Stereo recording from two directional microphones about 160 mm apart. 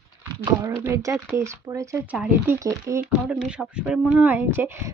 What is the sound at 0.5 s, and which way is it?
Speech, 20° right (ahead or behind).